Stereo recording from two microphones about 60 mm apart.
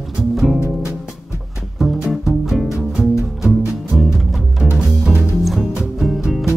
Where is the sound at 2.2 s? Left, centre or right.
Centre.